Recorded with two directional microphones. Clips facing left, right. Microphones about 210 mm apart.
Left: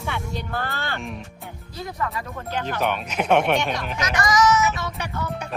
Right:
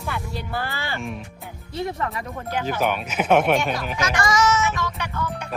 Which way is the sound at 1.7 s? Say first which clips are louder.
Right 3 dB; 25° right (ahead or behind).